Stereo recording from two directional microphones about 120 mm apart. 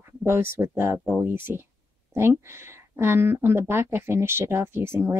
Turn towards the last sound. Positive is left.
turn(degrees=-20)  # may be behind; listen again after turning